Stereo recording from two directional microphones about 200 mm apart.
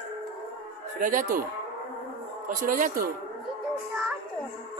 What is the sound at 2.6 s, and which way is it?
Speech, 45° right (ahead or behind).